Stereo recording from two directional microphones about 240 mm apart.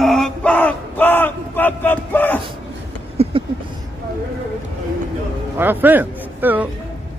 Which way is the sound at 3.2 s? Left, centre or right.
Right.